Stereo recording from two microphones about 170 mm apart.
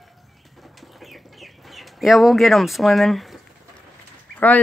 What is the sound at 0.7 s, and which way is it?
Chicken, centre (ahead or behind).